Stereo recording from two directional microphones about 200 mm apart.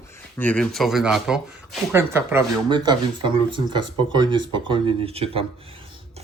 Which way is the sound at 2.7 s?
20° right (ahead or behind).